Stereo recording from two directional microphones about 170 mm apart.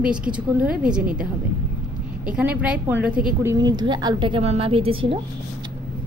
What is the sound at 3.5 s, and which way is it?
A woman's voice, 25° right (ahead or behind).